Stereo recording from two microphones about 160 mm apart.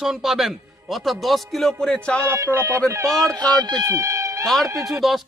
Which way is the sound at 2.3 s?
15° right (ahead or behind).